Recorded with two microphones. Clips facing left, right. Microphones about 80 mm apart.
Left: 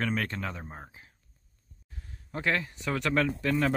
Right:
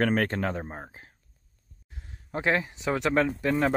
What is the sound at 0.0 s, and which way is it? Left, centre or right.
Speech, right.